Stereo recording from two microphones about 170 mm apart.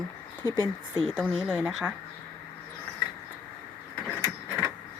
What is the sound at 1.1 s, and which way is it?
Speech, centre (ahead or behind).